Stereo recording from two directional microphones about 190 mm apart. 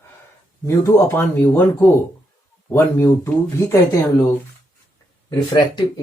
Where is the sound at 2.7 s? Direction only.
10° left (ahead or behind).